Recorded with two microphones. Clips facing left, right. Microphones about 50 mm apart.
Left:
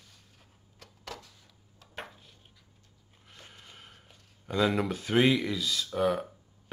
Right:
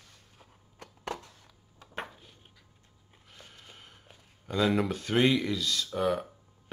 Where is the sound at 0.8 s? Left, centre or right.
Right.